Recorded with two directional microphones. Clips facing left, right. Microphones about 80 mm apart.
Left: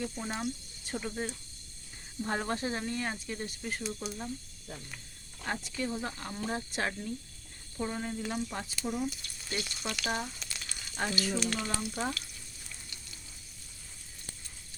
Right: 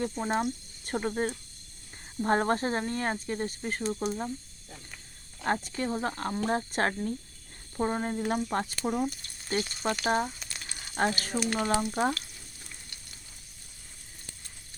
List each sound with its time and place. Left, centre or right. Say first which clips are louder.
0.0 s speech: right 6 dB; right
5.4 s speech: right 6 dB; right
12.6 s frying: left 1 dB; right